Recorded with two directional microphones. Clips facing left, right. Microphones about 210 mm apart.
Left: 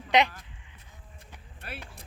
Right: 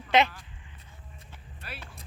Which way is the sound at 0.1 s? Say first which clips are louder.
Even; 15° left (ahead or behind).